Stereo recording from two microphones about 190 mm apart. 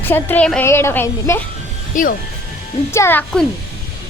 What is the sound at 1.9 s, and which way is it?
Speech, 45° left (ahead or behind).